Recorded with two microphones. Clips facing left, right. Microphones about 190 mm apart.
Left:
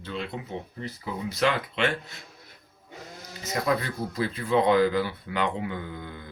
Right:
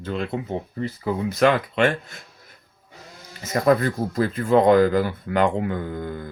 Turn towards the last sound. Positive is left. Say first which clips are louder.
# right 8 dB
turn(degrees=-45)  # may be behind; listen again after turning